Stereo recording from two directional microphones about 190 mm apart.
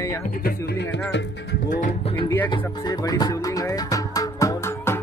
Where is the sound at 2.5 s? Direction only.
20° left (ahead or behind).